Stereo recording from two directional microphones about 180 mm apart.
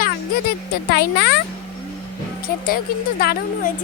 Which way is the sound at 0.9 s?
65° left (ahead or behind).